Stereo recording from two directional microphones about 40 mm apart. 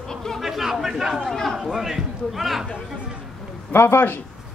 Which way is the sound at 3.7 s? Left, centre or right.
Left.